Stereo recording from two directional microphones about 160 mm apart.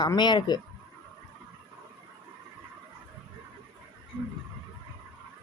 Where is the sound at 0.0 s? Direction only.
25° left (ahead or behind).